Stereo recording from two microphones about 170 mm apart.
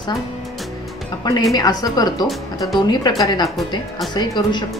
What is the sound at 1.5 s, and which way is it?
A woman's voice, 20° left (ahead or behind).